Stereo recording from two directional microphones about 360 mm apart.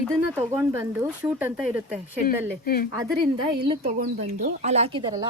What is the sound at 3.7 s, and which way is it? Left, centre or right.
Speech, right.